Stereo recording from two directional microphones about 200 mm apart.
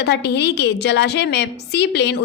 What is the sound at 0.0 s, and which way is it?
A woman's voice, 55° left (ahead or behind).